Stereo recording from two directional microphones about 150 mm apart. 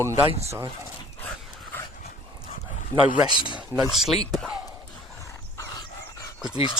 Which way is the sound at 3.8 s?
Centre (ahead or behind).